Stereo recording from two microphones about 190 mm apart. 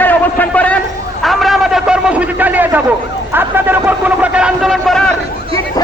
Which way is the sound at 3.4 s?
10° right (ahead or behind).